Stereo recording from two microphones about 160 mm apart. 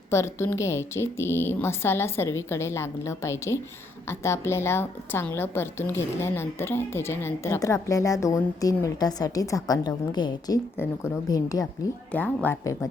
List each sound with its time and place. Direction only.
0.1 s a woman's voice: 15° left (ahead or behind)
12.1 s a woman's voice: 10° left (ahead or behind)